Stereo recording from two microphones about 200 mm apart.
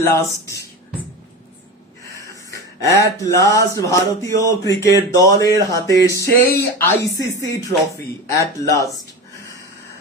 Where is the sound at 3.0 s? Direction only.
15° left (ahead or behind).